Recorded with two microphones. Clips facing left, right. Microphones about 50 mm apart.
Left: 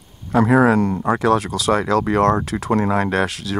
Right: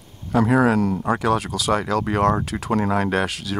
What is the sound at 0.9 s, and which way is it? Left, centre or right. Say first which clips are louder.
Speech: left 2 dB; centre.